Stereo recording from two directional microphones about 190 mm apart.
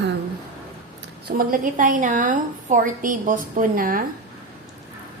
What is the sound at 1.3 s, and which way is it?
A woman's voice, 50° right (ahead or behind).